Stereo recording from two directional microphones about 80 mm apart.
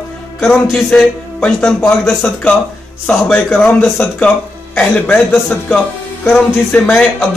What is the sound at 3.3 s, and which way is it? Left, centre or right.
A man's voice, centre.